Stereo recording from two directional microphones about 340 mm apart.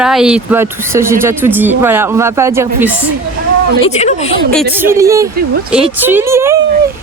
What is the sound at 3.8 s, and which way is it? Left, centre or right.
Speech, centre.